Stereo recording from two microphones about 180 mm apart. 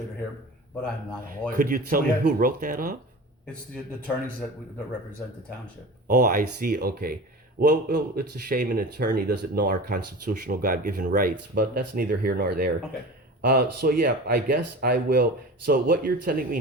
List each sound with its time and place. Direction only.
1.5 s speech: 50° right (ahead or behind)
6.1 s speech: 50° right (ahead or behind)